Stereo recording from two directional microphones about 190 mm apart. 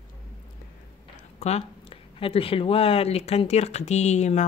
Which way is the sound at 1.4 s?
30° left (ahead or behind).